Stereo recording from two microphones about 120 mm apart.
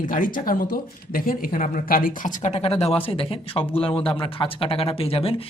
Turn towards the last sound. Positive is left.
turn(degrees=50)  # may be behind; listen again after turning